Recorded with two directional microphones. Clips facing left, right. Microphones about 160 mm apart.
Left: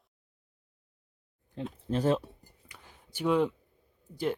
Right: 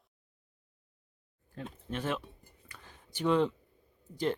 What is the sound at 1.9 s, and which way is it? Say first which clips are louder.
Speech: left 8 dB; 35° left (ahead or behind).